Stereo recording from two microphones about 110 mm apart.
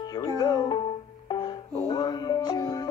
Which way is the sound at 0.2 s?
40° left (ahead or behind).